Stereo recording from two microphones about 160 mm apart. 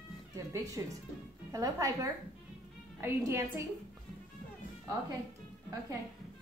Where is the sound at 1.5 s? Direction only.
20° right (ahead or behind).